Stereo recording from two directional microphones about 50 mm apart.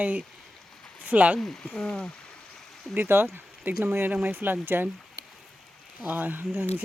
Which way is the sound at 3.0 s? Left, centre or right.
Right.